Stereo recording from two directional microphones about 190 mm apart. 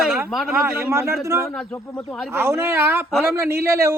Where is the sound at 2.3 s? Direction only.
15° right (ahead or behind).